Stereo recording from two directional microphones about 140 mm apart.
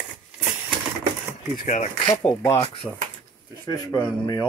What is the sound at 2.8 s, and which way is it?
Speech, 5° left (ahead or behind).